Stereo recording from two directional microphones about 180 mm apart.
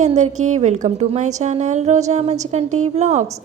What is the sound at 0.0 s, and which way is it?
A woman's voice, 40° right (ahead or behind).